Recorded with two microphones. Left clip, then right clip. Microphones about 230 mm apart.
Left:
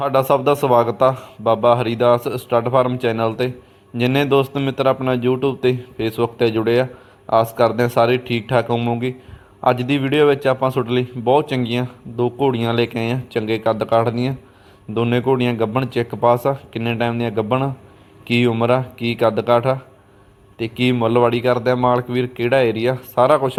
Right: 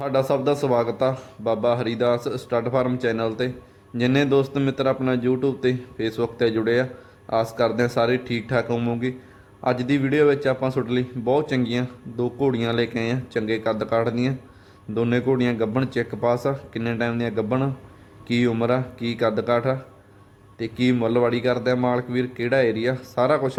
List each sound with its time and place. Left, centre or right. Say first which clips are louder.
0.0 s a man's voice: left 6 dB; centre